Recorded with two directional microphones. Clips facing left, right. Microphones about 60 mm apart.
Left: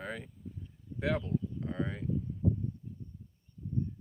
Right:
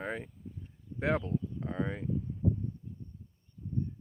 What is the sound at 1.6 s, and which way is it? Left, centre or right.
Speech, centre.